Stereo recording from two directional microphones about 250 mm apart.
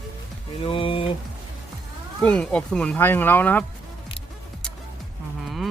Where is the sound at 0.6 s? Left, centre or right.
Left.